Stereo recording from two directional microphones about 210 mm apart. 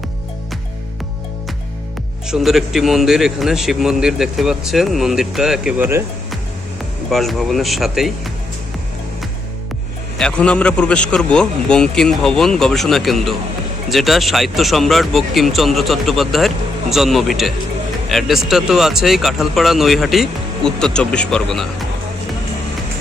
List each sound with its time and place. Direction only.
2.2 s a man's voice: centre (ahead or behind)
10.2 s a man's voice: 5° left (ahead or behind)